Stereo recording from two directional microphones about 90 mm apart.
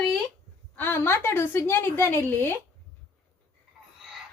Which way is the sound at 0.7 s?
25° left (ahead or behind).